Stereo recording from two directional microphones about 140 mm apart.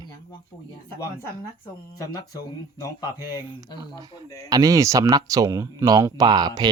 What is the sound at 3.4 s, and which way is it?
Speech, 15° right (ahead or behind).